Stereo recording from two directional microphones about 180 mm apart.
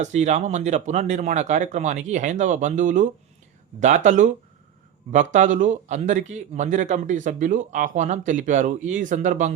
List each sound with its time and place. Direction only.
0.0 s speech: 40° right (ahead or behind)